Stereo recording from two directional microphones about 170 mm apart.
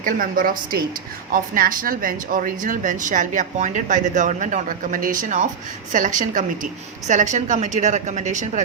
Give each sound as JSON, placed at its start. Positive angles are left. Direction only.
{"t": 0.0, "sound": "speech", "side_deg": -55}